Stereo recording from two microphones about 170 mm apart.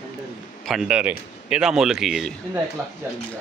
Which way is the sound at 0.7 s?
5° right (ahead or behind).